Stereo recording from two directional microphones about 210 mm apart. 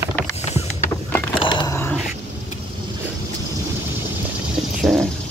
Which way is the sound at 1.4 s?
20° left (ahead or behind).